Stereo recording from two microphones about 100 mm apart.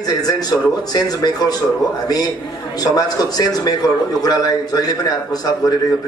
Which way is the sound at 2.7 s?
40° left (ahead or behind).